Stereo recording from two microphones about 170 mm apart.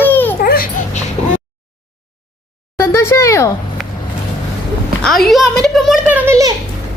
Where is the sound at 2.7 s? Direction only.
15° left (ahead or behind).